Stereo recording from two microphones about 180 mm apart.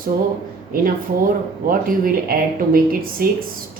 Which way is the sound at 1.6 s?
50° right (ahead or behind).